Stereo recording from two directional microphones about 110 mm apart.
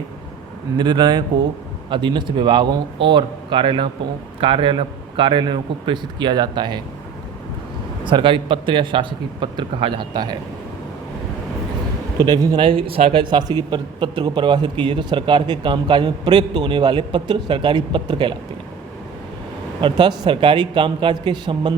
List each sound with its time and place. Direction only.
0.8 s a man's voice: 40° right (ahead or behind)
8.0 s a man's voice: 50° right (ahead or behind)
12.2 s speech: 35° right (ahead or behind)
12.5 s speech: 55° right (ahead or behind)
13.3 s a man's voice: 40° right (ahead or behind)
19.8 s a man's voice: 45° right (ahead or behind)